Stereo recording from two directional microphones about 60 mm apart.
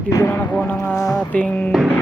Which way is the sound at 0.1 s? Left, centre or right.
Left.